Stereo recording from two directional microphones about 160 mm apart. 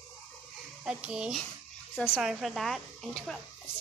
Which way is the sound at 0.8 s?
5° right (ahead or behind).